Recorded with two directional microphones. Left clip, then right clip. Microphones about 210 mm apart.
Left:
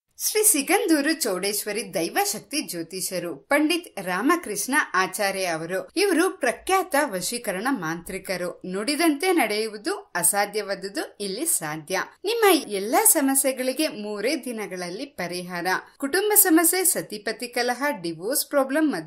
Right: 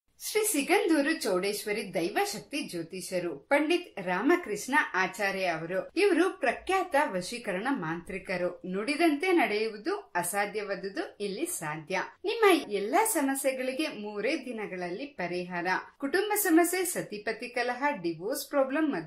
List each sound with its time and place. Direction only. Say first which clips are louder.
0.3 s speech: left 5 dB; 55° left (ahead or behind)